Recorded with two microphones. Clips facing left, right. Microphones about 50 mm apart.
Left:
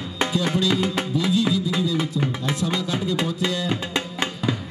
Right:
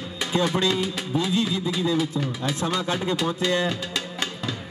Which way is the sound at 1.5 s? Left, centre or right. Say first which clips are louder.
Left 4 dB; left.